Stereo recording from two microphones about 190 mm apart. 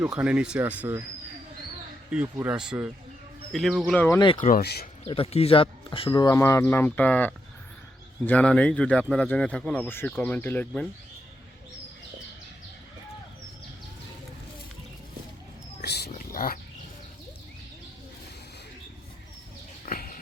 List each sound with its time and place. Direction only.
0.0 s speech: 5° right (ahead or behind)
2.0 s speech: 10° right (ahead or behind); by 4.2 s 10° left (ahead or behind)
4.4 s speech: 45° left (ahead or behind)
5.0 s speech: 30° left (ahead or behind); by 10.8 s 10° left (ahead or behind)
15.8 s a sound: 60° left (ahead or behind)
19.8 s bird: 50° left (ahead or behind)